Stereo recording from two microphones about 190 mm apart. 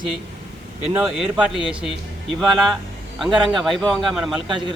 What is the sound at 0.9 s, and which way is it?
Speech, 5° right (ahead or behind).